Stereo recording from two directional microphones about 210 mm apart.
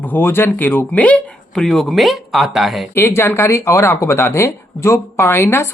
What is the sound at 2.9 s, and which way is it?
Speech, 10° left (ahead or behind).